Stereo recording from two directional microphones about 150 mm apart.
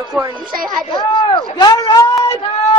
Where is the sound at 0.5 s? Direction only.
70° right (ahead or behind).